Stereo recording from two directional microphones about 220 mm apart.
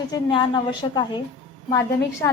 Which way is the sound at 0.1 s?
20° left (ahead or behind).